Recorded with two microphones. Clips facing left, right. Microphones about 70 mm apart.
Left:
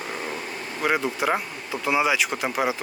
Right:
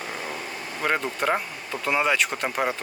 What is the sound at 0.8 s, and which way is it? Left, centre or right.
Speech, centre.